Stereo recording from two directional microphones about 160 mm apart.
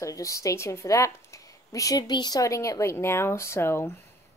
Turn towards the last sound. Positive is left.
turn(degrees=15)  # may be behind; listen again after turning